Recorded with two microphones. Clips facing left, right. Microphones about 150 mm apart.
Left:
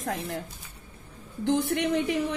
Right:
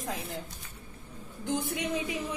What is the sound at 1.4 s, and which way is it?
Speech, 65° left (ahead or behind).